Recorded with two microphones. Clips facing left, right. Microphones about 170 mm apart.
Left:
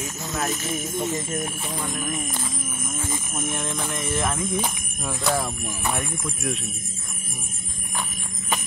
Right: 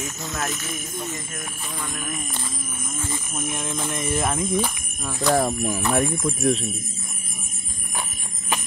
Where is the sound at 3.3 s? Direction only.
Centre (ahead or behind).